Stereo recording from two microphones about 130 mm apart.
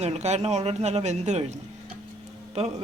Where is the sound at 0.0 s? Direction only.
60° right (ahead or behind).